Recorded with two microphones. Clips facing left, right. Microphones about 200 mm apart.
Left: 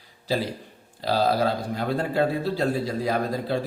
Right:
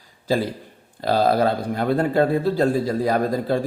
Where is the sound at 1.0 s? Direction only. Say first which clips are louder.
Right 4 dB; 55° right (ahead or behind).